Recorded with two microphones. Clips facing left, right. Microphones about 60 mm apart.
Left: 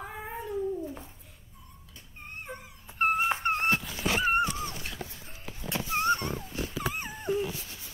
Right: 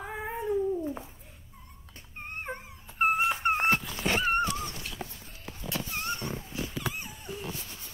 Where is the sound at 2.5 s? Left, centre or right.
Right.